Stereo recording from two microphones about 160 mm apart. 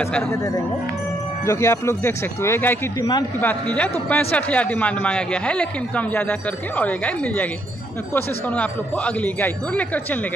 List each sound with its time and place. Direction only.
0.0 s a man's voice: 15° left (ahead or behind)
1.4 s a man's voice: 15° left (ahead or behind)